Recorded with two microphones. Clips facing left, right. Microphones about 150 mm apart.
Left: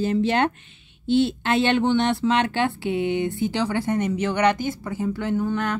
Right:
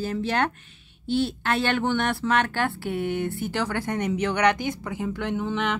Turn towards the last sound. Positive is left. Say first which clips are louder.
# left 4 dB
turn(degrees=0)  # may be behind; listen again after turning